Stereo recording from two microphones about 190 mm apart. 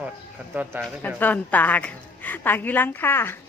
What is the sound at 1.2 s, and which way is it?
A woman's voice, 10° left (ahead or behind).